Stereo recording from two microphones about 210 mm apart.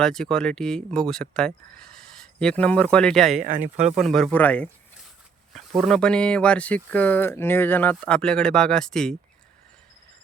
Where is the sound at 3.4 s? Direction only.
40° right (ahead or behind).